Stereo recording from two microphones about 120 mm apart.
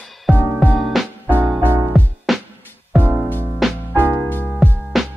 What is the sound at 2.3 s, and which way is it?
Music, centre (ahead or behind).